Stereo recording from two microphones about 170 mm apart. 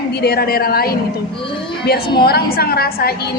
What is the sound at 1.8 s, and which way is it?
A woman's voice, 65° left (ahead or behind).